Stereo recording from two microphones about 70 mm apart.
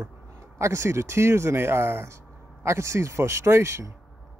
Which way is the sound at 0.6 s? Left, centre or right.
Right.